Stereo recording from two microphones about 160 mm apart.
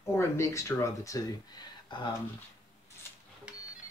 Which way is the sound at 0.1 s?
20° left (ahead or behind).